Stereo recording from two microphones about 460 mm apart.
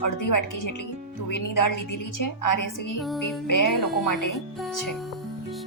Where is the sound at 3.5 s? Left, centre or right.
Left.